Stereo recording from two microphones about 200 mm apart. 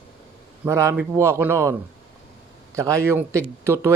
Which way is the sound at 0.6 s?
15° right (ahead or behind).